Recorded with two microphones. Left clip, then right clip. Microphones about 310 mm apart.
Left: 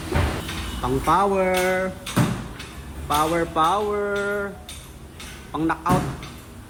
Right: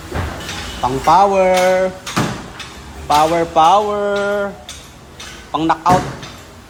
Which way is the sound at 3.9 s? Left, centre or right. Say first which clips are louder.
Right 7 dB; right.